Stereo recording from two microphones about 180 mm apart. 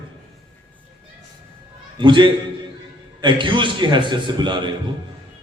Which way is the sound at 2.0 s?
25° right (ahead or behind).